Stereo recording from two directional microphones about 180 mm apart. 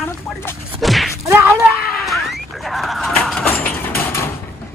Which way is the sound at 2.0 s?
Centre (ahead or behind).